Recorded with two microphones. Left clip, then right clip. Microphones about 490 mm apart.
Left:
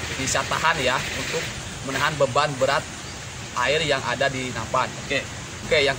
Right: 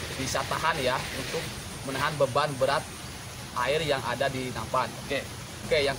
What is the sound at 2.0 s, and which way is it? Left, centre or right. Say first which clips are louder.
Speech: left 5 dB; right.